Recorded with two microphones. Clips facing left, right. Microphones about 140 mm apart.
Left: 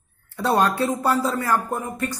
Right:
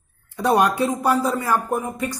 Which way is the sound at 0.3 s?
15° right (ahead or behind).